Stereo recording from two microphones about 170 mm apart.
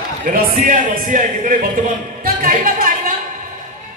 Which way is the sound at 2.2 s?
55° right (ahead or behind).